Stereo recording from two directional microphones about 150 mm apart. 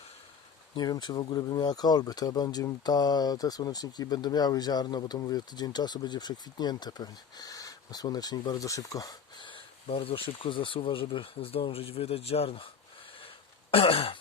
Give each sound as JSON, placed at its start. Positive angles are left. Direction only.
{"t": 0.8, "sound": "speech", "side_deg": 30}
{"t": 13.2, "sound": "throat clearing", "side_deg": 40}